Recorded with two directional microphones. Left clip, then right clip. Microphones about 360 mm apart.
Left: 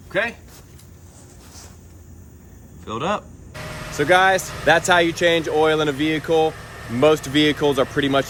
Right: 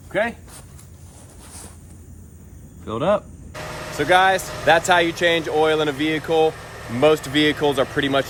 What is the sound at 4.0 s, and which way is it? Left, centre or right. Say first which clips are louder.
Speech: even; centre.